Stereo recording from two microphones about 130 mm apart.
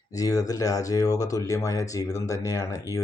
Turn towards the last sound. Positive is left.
turn(degrees=25)  # may be behind; listen again after turning